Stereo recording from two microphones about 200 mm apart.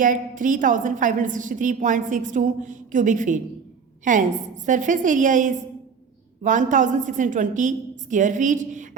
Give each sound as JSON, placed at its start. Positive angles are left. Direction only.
{"t": 0.0, "sound": "a woman's voice", "side_deg": -40}